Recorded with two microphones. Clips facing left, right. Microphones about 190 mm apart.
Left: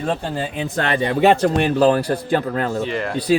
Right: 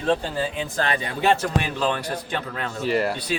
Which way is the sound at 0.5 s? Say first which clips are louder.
Left 4 dB; 65° left (ahead or behind).